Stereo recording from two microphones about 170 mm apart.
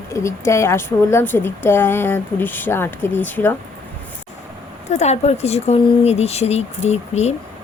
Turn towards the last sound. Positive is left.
turn(degrees=40)  # may be behind; listen again after turning